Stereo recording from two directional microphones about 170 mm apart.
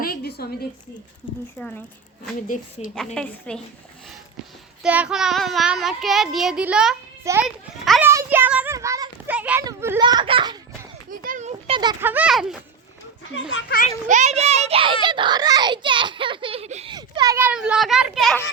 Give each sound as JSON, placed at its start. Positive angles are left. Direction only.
{"t": 0.0, "sound": "a sound", "side_deg": 65}
{"t": 1.5, "sound": "a child's voice", "side_deg": 5}
{"t": 2.5, "sound": "a woman's voice", "side_deg": 50}
{"t": 3.2, "sound": "a child's voice", "side_deg": 5}
{"t": 4.8, "sound": "a child's voice", "side_deg": -5}
{"t": 8.1, "sound": "a child's voice", "side_deg": -15}
{"t": 10.0, "sound": "a child's voice", "side_deg": -25}
{"t": 11.2, "sound": "a child's voice", "side_deg": -50}
{"t": 11.7, "sound": "a child's voice", "side_deg": -25}
{"t": 11.9, "sound": "a child's voice", "side_deg": -10}
{"t": 13.6, "sound": "a child's voice", "side_deg": 75}
{"t": 14.1, "sound": "a child's voice", "side_deg": -45}
{"t": 16.9, "sound": "a child's voice", "side_deg": -25}
{"t": 17.4, "sound": "a child's voice", "side_deg": -5}